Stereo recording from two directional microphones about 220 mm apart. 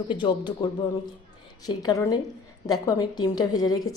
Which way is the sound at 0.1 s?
20° left (ahead or behind).